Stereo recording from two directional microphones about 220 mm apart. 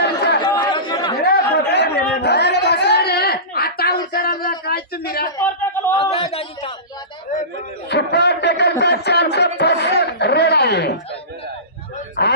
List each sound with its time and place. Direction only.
0.4 s chatter: 20° left (ahead or behind)
1.2 s chatter: 45° left (ahead or behind)
5.4 s a sound: 10° left (ahead or behind)
6.0 s a man's voice: 25° left (ahead or behind)
7.9 s a man's voice: 50° left (ahead or behind)
11.9 s a sound: 35° left (ahead or behind)